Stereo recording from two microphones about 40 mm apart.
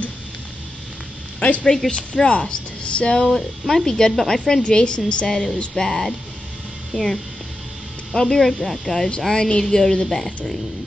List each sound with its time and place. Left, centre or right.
1.9 s speech: left
3.3 s speech: centre
3.8 s speech: centre
4.6 s a woman's voice: left
5.3 s speech: centre
9.3 s speech: centre
10.0 s speech: centre